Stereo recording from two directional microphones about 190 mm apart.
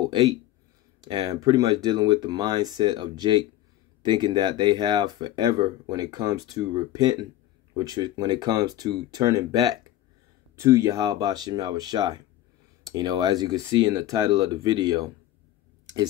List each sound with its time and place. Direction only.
1.0 s speech: 25° right (ahead or behind)